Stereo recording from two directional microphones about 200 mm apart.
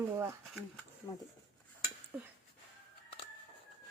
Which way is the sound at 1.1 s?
15° left (ahead or behind).